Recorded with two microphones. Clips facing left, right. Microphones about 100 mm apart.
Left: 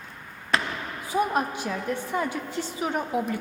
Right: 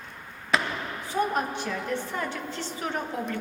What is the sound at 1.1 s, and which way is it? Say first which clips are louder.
A woman's voice: left 2 dB; 10° left (ahead or behind).